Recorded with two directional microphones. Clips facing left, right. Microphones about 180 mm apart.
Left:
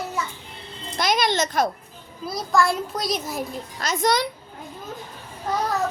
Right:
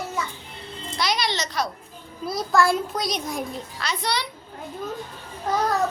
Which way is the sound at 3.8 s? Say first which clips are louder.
Left 7 dB; 45° left (ahead or behind).